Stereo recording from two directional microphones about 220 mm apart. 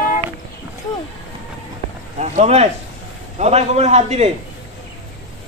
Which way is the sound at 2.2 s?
30° right (ahead or behind).